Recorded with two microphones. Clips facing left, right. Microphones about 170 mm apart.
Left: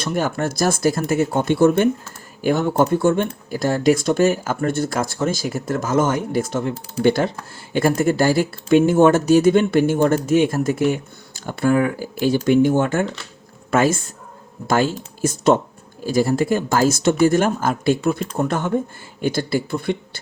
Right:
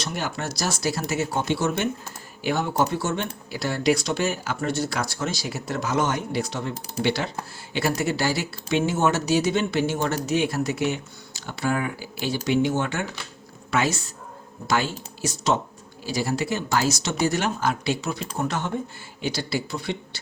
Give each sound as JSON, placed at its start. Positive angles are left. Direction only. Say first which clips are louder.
{"t": 0.0, "sound": "a man's voice", "louder": "left 8 dB", "side_deg": 50}